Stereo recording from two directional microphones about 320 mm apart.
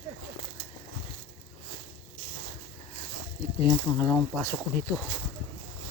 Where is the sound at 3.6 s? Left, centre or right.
Centre.